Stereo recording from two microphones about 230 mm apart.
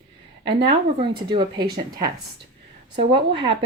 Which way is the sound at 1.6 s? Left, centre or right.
Right.